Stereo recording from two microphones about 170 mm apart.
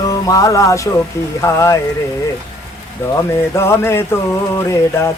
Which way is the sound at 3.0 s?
15° left (ahead or behind).